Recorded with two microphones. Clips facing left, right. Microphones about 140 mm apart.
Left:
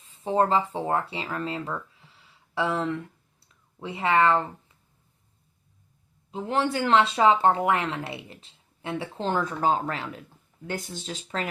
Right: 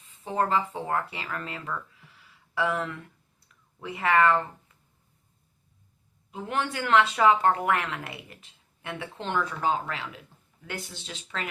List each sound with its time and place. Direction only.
0.2 s speech: 30° left (ahead or behind)
6.3 s speech: 30° left (ahead or behind)